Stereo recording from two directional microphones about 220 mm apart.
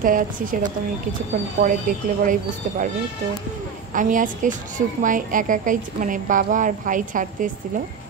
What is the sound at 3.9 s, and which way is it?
A woman's voice, 35° right (ahead or behind).